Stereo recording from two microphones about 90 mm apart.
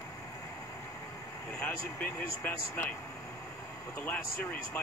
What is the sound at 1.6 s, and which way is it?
Speech, 20° left (ahead or behind).